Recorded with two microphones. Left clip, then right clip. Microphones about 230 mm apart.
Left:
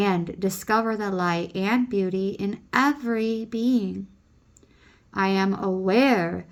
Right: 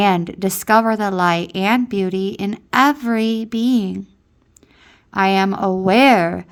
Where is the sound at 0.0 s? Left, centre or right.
Right.